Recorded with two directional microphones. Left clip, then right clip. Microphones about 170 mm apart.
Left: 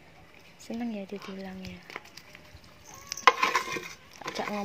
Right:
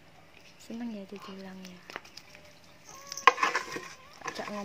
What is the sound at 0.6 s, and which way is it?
Speech, 10° left (ahead or behind).